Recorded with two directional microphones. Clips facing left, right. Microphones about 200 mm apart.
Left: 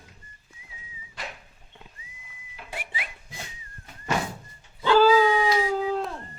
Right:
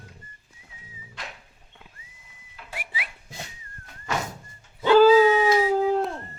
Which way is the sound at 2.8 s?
5° right (ahead or behind).